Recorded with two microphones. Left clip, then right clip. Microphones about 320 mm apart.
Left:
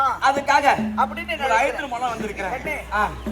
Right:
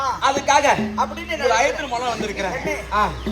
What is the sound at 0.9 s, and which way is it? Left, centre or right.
Speech, centre.